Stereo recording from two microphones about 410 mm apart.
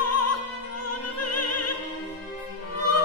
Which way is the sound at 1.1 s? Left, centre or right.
Left.